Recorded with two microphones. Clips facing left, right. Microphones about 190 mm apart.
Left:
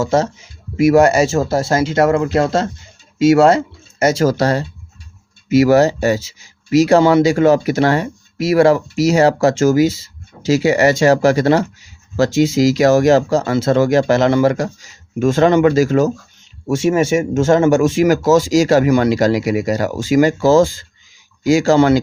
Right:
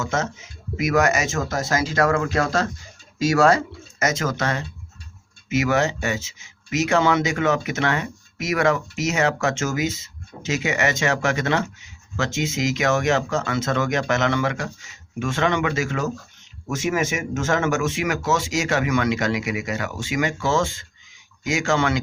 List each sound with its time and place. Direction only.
0.0 s speech: 35° left (ahead or behind)